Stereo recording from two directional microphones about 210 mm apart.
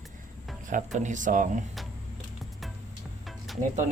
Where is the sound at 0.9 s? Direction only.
35° right (ahead or behind).